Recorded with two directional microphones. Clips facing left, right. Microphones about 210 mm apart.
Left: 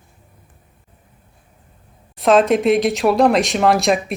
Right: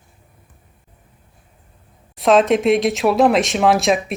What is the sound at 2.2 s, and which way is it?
Speech, centre (ahead or behind).